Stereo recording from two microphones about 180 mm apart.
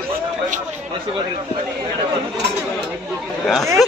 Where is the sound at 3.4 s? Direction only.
Centre (ahead or behind).